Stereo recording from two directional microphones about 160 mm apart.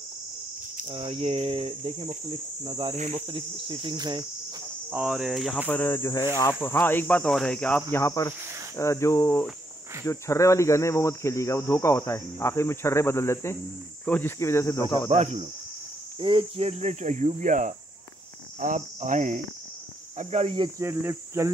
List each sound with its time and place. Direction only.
0.9 s cricket: 35° right (ahead or behind)
3.0 s cricket: 45° right (ahead or behind); by 4.3 s 25° right (ahead or behind)
4.9 s cricket: 5° right (ahead or behind)
5.7 s cricket: 15° left (ahead or behind)
6.2 s speech: 20° left (ahead or behind)
6.6 s cricket: 15° left (ahead or behind)
7.9 s cricket: 20° left (ahead or behind)
15.0 s cricket: 45° right (ahead or behind)
16.2 s cricket: 35° right (ahead or behind); by 19.4 s 50° right (ahead or behind)
20.2 s cricket: 40° right (ahead or behind)
20.8 s speech: 15° right (ahead or behind)